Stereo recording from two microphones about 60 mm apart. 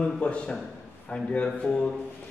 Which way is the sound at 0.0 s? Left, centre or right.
Centre.